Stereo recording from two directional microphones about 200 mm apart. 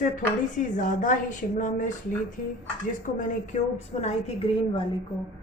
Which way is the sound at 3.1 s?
35° left (ahead or behind).